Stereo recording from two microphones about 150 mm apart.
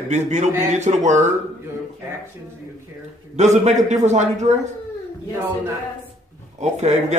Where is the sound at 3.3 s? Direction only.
50° right (ahead or behind).